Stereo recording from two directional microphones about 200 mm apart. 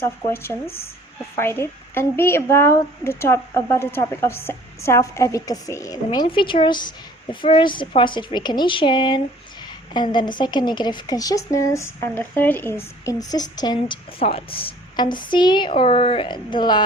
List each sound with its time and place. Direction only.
0.0 s a woman's voice: 10° left (ahead or behind)